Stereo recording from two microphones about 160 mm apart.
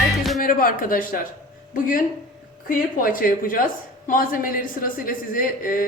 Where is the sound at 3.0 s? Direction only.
60° left (ahead or behind).